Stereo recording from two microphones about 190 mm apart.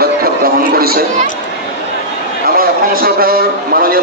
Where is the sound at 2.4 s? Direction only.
50° right (ahead or behind).